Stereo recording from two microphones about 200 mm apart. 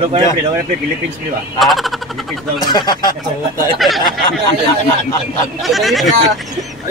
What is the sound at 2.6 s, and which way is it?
Speech, 20° left (ahead or behind).